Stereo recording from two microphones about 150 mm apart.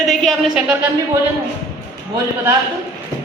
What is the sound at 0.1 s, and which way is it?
Speech, centre (ahead or behind).